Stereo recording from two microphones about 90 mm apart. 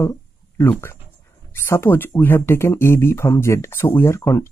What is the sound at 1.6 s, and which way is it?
Speech, 25° left (ahead or behind).